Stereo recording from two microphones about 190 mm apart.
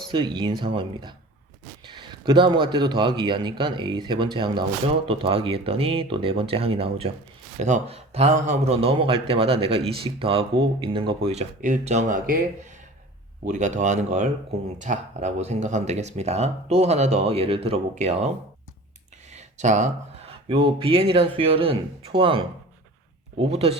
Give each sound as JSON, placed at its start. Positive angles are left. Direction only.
{"t": 0.1, "sound": "a man's voice", "side_deg": -25}
{"t": 19.3, "sound": "a sound", "side_deg": -35}
{"t": 20.5, "sound": "a man's voice", "side_deg": -30}